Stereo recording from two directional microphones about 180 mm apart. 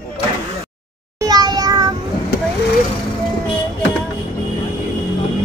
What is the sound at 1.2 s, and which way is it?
Meow, 20° right (ahead or behind).